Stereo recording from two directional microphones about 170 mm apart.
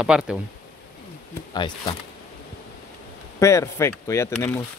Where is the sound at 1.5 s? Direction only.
25° left (ahead or behind).